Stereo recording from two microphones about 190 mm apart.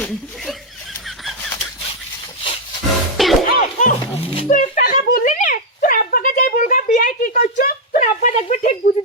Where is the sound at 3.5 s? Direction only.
45° left (ahead or behind).